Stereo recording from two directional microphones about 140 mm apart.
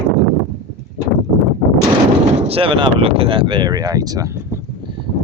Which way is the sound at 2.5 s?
40° right (ahead or behind).